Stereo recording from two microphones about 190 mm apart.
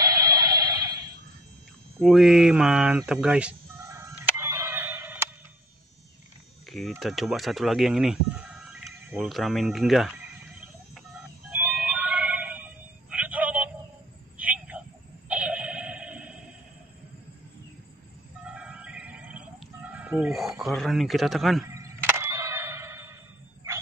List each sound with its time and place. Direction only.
0.0 s music: 15° right (ahead or behind)
2.0 s bleat: centre (ahead or behind)
6.7 s speech: centre (ahead or behind)
11.5 s music: 5° right (ahead or behind)
14.3 s a sound: 5° right (ahead or behind)
18.4 s music: 5° right (ahead or behind)
21.6 s a sound: 15° right (ahead or behind)